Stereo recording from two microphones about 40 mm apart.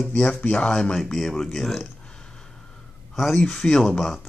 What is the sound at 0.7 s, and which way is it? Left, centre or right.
Speech, centre.